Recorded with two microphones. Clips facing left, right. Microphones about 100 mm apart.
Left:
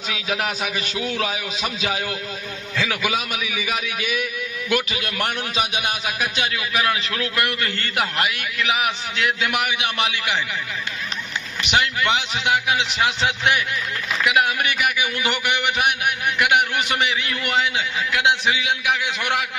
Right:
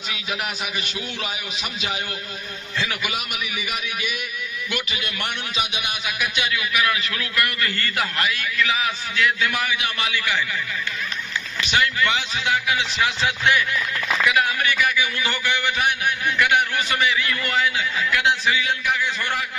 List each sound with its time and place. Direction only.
0.1 s a man's voice: 90° left
2.7 s a man's voice: 90° left
5.2 s a man's voice: 40° left (ahead or behind); by 10.4 s 20° left (ahead or behind)
11.6 s a man's voice: 20° left (ahead or behind)
18.9 s a man's voice: 70° left (ahead or behind)